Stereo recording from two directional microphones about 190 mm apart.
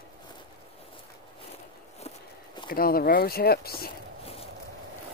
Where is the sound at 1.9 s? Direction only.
30° left (ahead or behind).